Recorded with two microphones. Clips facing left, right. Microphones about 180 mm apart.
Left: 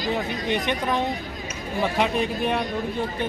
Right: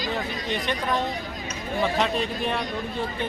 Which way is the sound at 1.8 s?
10° left (ahead or behind).